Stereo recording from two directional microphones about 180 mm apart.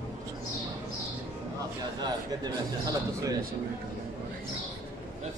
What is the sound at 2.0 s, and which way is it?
A man's voice, 20° right (ahead or behind).